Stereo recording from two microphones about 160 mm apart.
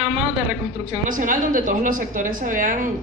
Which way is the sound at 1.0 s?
55° right (ahead or behind).